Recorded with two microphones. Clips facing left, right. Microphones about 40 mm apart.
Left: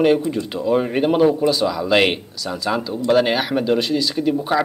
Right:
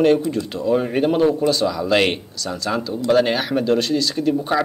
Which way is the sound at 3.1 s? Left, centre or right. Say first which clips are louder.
Even; centre.